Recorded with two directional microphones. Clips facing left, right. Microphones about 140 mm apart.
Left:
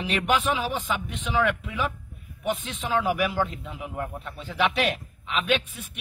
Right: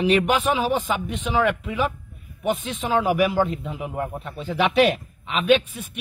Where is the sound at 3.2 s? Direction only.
20° right (ahead or behind).